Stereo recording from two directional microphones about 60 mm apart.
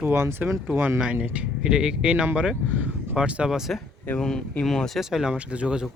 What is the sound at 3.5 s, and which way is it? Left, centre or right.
Speech, centre.